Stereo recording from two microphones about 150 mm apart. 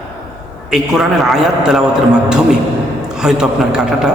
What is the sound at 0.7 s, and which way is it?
A man's voice, 5° right (ahead or behind).